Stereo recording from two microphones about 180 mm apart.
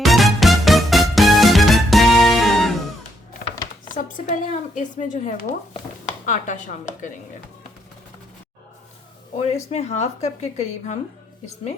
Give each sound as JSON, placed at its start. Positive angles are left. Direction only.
{"t": 0.0, "sound": "music", "side_deg": 0}
{"t": 3.8, "sound": "a woman's voice", "side_deg": 45}
{"t": 9.6, "sound": "a woman's voice", "side_deg": 35}